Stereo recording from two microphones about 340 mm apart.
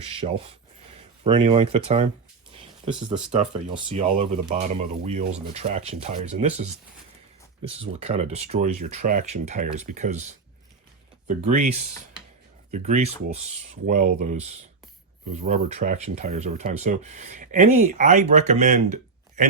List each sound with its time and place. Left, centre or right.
0.1 s speech: centre
3.3 s speech: centre